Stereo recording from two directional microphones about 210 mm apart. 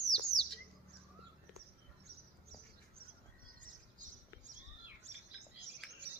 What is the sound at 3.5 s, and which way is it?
Bird, 35° right (ahead or behind).